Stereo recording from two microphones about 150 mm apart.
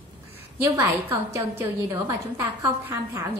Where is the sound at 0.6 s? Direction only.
20° right (ahead or behind).